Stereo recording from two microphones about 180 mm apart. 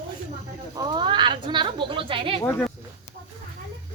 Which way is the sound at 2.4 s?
10° left (ahead or behind).